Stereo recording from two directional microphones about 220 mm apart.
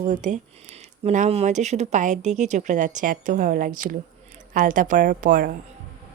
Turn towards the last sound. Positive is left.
turn(degrees=-40)  # may be behind; listen again after turning